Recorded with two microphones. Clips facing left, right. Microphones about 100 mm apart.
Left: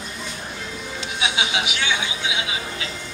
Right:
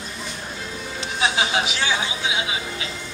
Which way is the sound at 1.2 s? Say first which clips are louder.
Right 3 dB; 40° right (ahead or behind).